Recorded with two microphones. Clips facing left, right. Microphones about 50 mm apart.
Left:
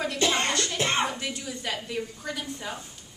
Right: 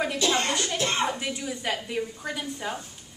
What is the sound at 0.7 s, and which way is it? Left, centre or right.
Music, left.